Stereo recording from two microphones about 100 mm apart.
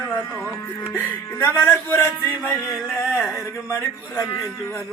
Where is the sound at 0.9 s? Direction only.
20° left (ahead or behind).